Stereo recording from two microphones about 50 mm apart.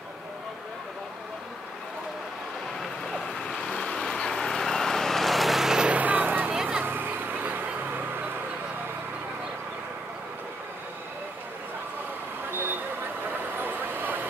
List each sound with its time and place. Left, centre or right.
3.1 s vehicle: centre
5.9 s music: right
6.5 s vehicle: centre
6.8 s a sound: right
12.4 s vehicle: right